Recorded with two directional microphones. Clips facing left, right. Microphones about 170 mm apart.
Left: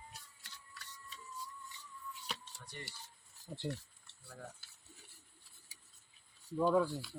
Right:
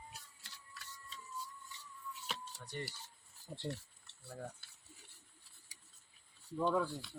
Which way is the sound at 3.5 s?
Centre (ahead or behind).